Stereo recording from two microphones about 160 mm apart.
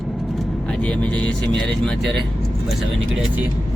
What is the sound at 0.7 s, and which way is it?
Speech, 10° left (ahead or behind).